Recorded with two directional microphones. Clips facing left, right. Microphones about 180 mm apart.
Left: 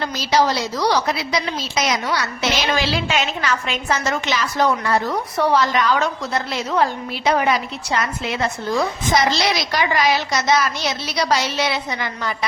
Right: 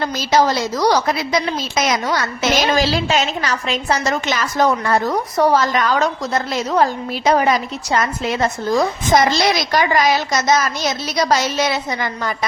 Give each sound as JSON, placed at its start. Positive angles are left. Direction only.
{"t": 0.0, "sound": "a woman's voice", "side_deg": -45}